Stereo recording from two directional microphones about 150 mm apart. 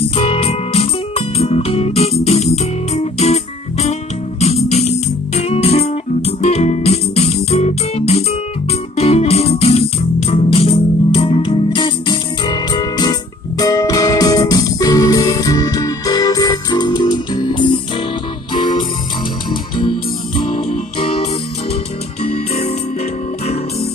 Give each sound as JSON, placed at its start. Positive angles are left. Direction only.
{"t": 0.1, "sound": "music", "side_deg": 40}
{"t": 20.3, "sound": "music", "side_deg": 50}
{"t": 21.0, "sound": "music", "side_deg": 40}